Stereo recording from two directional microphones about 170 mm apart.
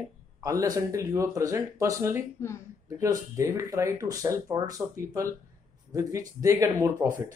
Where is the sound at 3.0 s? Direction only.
20° right (ahead or behind).